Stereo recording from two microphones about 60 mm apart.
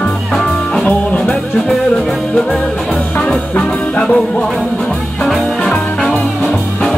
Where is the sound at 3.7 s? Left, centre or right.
Centre.